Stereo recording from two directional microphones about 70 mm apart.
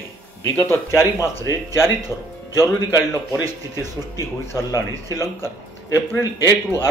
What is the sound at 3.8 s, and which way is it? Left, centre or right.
Speech, left.